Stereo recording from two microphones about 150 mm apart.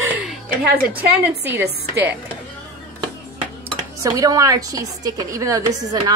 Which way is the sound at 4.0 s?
20° right (ahead or behind).